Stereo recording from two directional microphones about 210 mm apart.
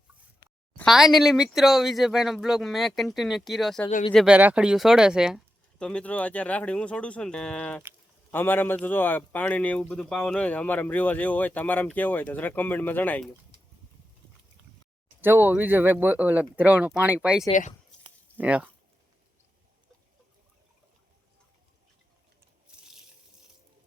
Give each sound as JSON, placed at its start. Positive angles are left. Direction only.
{"t": 0.8, "sound": "speech", "side_deg": 0}
{"t": 3.8, "sound": "speech", "side_deg": 30}
{"t": 4.1, "sound": "speech", "side_deg": 0}
{"t": 15.2, "sound": "speech", "side_deg": -10}
{"t": 17.5, "sound": "speech", "side_deg": 35}
{"t": 18.3, "sound": "speech", "side_deg": -5}
{"t": 22.8, "sound": "a sound", "side_deg": -5}